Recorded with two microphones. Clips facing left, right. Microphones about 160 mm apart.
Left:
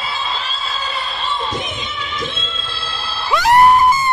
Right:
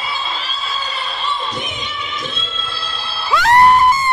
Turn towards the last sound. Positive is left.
turn(degrees=20)  # may be behind; listen again after turning